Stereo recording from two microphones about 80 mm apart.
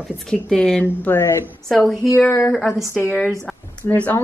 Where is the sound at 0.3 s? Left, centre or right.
Centre.